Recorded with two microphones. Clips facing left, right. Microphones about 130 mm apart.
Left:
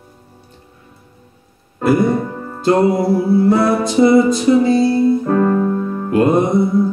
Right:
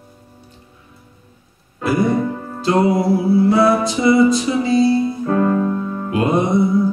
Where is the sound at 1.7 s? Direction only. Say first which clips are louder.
Left 3 dB; 50° left (ahead or behind).